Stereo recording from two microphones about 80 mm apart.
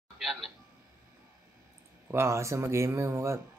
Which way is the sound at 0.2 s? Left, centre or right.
Centre.